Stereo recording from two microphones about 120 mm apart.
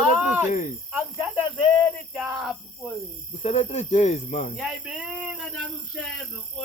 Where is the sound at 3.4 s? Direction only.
65° left (ahead or behind); by 4.5 s 90° left.